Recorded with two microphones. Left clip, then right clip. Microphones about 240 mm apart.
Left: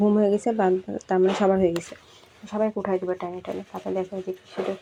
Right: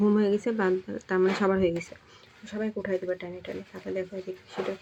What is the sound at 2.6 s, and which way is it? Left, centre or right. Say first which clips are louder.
Speech: left 6 dB; left.